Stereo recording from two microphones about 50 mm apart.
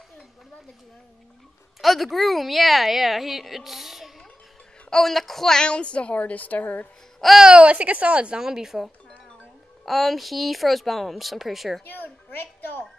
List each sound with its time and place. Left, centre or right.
1.8 s a woman's voice: centre
4.8 s a woman's voice: centre; by 6.9 s left
7.3 s a woman's voice: centre
8.4 s a woman's voice: centre
11.8 s a woman's voice: left